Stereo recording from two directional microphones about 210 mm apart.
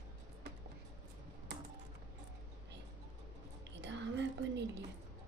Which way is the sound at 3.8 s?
55° right (ahead or behind).